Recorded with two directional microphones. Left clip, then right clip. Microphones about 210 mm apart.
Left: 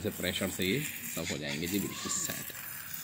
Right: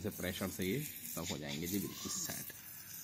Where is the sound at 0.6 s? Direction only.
10° right (ahead or behind).